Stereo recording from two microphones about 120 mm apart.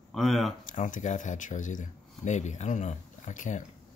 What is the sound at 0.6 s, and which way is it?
Speech, 90° left.